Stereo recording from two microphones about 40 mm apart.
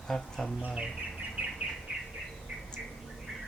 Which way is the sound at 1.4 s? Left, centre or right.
Right.